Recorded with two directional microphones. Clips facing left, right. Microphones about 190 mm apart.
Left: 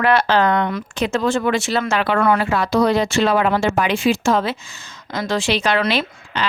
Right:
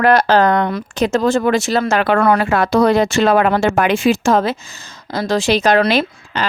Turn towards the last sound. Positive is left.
turn(degrees=-45)  # may be behind; listen again after turning